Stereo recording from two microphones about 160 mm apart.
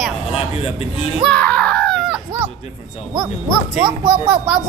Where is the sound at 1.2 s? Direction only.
5° left (ahead or behind).